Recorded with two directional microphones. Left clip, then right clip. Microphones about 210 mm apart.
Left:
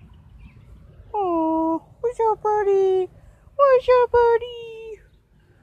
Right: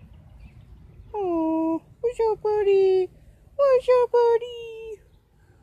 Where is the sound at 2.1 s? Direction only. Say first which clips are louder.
Left 2 dB; 25° left (ahead or behind).